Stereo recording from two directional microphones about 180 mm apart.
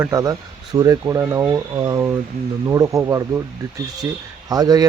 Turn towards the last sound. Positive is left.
turn(degrees=-20)  # may be behind; listen again after turning